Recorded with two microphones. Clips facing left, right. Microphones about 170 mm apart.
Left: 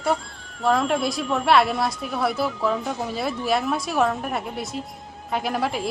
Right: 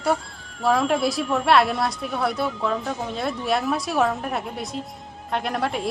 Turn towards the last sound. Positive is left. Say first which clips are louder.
# even
turn(degrees=0)  # may be behind; listen again after turning